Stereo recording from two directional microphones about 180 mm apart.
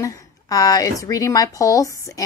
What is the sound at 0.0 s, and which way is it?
A woman's voice, 20° left (ahead or behind).